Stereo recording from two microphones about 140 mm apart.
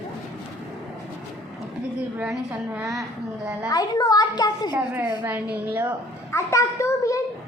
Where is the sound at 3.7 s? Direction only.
30° left (ahead or behind).